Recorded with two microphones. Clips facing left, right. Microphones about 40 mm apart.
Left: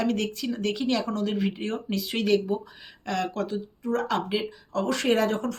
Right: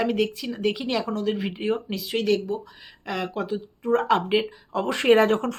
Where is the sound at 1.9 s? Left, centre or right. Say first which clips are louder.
Left 4 dB; centre.